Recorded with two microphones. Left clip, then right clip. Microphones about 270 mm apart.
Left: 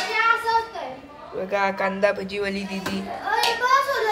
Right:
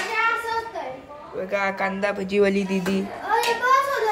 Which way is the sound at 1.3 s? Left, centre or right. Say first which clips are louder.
Left 1 dB; centre.